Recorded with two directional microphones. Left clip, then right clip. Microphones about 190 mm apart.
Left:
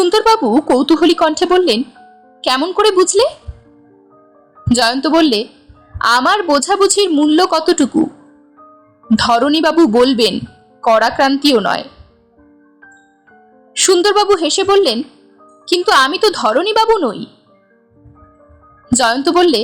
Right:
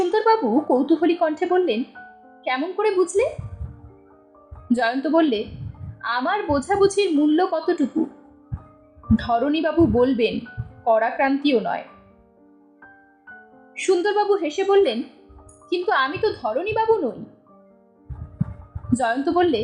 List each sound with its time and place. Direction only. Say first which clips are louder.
0.1 s a woman's voice: left 7 dB; 30° left (ahead or behind)
4.7 s a woman's voice: left 7 dB; 35° left (ahead or behind)
9.1 s a woman's voice: left 9 dB; 35° left (ahead or behind)
13.7 s a woman's voice: left 9 dB; 35° left (ahead or behind)
18.9 s a woman's voice: left 8 dB; 30° left (ahead or behind)